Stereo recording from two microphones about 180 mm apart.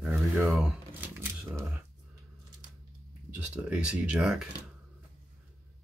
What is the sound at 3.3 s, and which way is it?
Speech, 10° right (ahead or behind).